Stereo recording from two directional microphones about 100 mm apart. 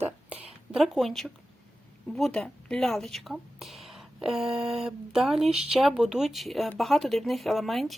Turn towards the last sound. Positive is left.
turn(degrees=0)  # may be behind; listen again after turning